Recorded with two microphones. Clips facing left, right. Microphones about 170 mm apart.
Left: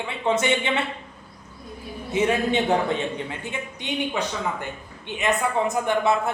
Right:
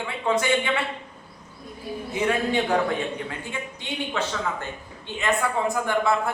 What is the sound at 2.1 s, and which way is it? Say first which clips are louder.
A man's voice: left 2 dB; 20° left (ahead or behind).